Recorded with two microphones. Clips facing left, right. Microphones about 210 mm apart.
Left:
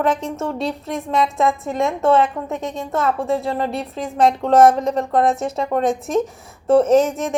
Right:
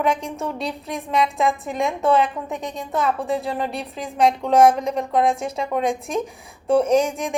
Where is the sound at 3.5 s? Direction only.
25° left (ahead or behind).